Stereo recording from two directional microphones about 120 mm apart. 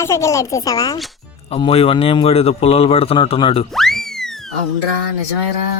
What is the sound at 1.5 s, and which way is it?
A man's voice, 55° left (ahead or behind).